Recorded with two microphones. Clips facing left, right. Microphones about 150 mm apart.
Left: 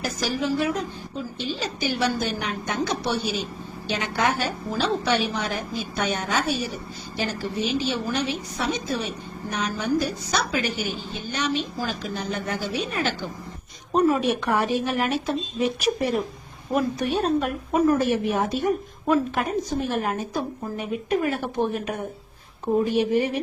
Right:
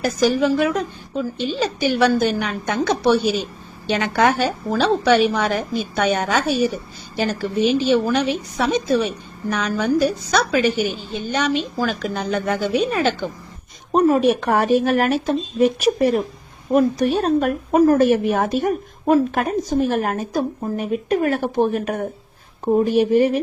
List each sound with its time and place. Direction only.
0.0 s a woman's voice: 65° right (ahead or behind)
14.0 s a woman's voice: 55° right (ahead or behind)
16.7 s a woman's voice: 35° right (ahead or behind); by 23.4 s 50° right (ahead or behind)